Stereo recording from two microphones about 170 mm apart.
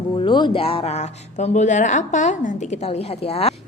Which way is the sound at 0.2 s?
25° left (ahead or behind).